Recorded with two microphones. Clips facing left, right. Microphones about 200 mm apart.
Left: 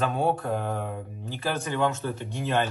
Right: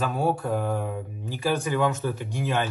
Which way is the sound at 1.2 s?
15° right (ahead or behind).